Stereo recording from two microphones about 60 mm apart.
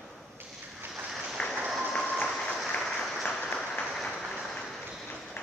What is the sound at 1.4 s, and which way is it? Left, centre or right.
Applause, centre.